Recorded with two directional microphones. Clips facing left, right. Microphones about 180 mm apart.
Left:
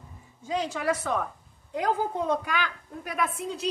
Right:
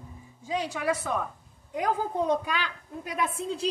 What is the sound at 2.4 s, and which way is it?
A woman's voice, 20° right (ahead or behind).